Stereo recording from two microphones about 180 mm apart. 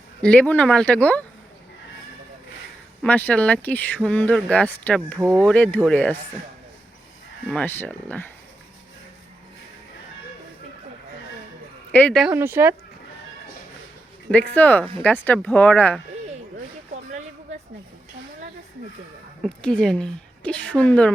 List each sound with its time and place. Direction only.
0.2 s speech: 5° left (ahead or behind)
3.0 s speech: 10° left (ahead or behind)
5.2 s speech: 15° right (ahead or behind)
5.5 s speech: 10° left (ahead or behind)
7.5 s speech: 10° left (ahead or behind)
11.9 s speech: 5° left (ahead or behind)
12.3 s speech: 15° right (ahead or behind)
14.5 s speech: 10° left (ahead or behind)
19.4 s a woman's voice: 5° left (ahead or behind)